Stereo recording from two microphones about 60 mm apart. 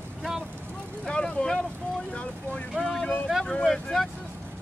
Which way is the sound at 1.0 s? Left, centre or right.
Centre.